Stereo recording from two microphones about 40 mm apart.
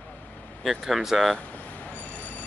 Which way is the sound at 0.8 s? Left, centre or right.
Centre.